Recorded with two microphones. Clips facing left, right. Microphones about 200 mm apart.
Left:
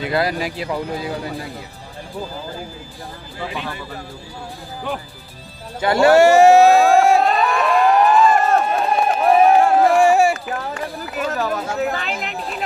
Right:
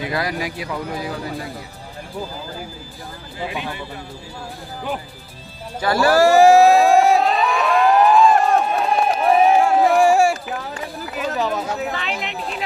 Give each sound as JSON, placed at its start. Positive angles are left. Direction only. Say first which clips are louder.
{"t": 0.1, "sound": "speech", "louder": "left 7 dB", "side_deg": 30}
{"t": 5.8, "sound": "speech", "louder": "left 4 dB", "side_deg": 25}
{"t": 6.2, "sound": "a sound", "louder": "right 2 dB", "side_deg": 0}
{"t": 11.4, "sound": "speech", "louder": "left 2 dB", "side_deg": 0}